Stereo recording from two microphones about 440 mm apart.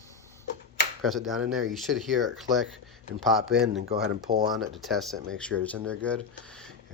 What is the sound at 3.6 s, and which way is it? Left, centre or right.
Speech, right.